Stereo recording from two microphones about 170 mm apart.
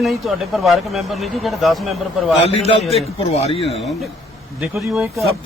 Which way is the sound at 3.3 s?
35° left (ahead or behind).